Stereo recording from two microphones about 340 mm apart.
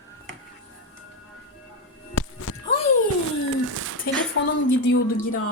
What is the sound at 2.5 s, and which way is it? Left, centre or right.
Music, left.